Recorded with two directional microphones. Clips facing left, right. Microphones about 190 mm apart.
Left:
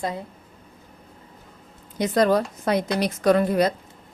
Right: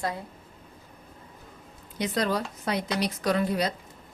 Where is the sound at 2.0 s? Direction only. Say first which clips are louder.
Left 8 dB; 50° left (ahead or behind).